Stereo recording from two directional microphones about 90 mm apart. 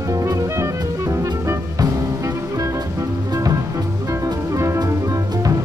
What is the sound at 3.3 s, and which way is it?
Music, 45° right (ahead or behind).